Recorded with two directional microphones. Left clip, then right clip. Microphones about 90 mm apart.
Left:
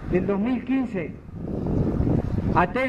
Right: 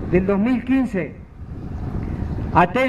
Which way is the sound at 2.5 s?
30° right (ahead or behind).